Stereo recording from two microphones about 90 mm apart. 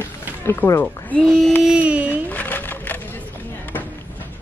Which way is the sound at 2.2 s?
20° left (ahead or behind).